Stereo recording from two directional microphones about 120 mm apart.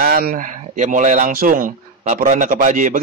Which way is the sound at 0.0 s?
85° right.